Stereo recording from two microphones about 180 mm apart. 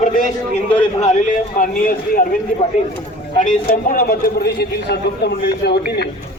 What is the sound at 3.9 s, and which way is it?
A man's voice, 55° left (ahead or behind).